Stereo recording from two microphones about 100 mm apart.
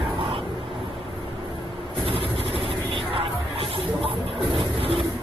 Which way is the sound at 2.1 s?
70° right (ahead or behind).